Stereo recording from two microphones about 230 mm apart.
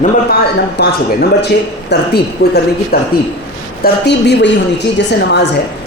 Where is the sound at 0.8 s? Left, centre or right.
Left.